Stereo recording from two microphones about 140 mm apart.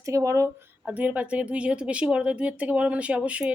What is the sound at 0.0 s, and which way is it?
Speech, 20° right (ahead or behind).